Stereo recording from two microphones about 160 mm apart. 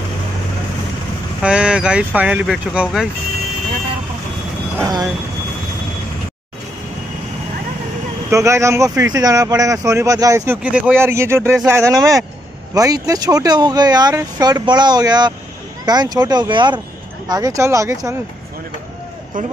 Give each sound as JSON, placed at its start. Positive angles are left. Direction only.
{"t": 1.4, "sound": "speech", "side_deg": -5}
{"t": 4.7, "sound": "speech", "side_deg": -20}
{"t": 8.3, "sound": "speech", "side_deg": -20}